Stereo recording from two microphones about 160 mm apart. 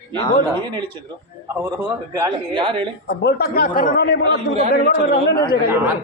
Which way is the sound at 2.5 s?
35° right (ahead or behind).